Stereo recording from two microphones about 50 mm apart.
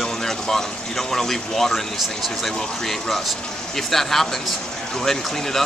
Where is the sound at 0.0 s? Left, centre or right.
Centre.